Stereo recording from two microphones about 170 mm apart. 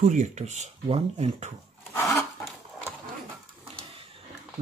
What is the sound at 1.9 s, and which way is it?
Wood, 15° left (ahead or behind).